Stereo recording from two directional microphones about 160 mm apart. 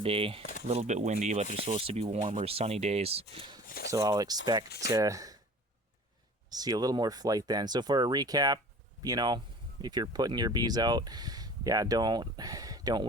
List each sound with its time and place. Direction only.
0.0 s speech: 35° right (ahead or behind)
1.6 s speech: 35° right (ahead or behind)
3.7 s speech: 70° left (ahead or behind)
3.9 s speech: 25° right (ahead or behind)
6.5 s speech: 25° right (ahead or behind)